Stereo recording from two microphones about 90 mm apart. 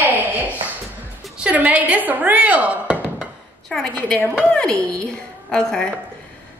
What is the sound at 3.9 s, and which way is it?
A woman's voice, 15° left (ahead or behind).